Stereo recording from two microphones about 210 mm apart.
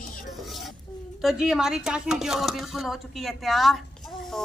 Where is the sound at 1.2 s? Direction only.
Centre (ahead or behind).